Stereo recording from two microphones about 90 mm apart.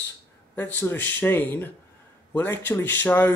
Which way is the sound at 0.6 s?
25° left (ahead or behind).